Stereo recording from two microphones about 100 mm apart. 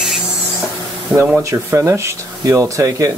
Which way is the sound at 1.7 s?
25° right (ahead or behind).